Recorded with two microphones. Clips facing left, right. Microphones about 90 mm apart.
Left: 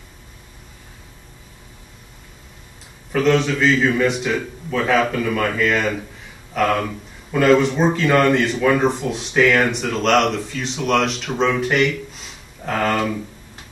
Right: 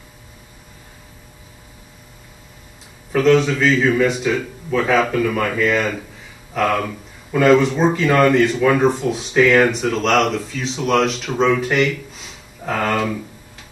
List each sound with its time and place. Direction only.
3.1 s speech: centre (ahead or behind)